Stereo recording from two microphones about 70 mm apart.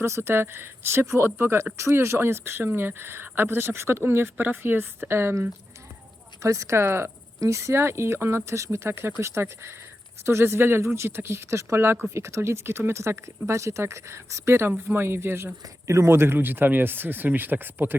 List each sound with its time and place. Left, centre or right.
0.0 s speech: right
6.4 s speech: right
15.6 s speech: right